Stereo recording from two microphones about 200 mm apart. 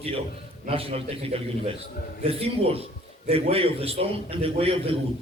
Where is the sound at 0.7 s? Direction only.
30° right (ahead or behind).